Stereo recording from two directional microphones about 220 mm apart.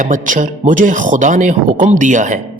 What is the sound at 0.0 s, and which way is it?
A man's voice, 35° right (ahead or behind).